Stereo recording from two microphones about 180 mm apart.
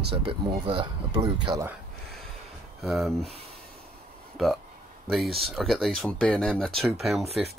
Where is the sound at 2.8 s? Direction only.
Centre (ahead or behind).